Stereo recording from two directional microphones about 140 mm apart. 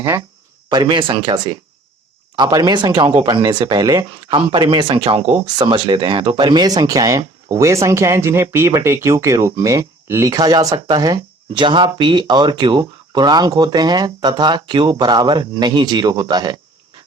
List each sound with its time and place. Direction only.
0.0 s speech: 20° right (ahead or behind)
0.7 s speech: 35° right (ahead or behind)